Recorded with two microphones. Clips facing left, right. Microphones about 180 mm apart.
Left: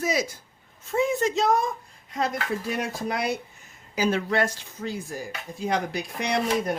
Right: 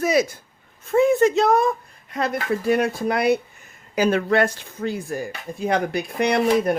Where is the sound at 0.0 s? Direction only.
60° right (ahead or behind).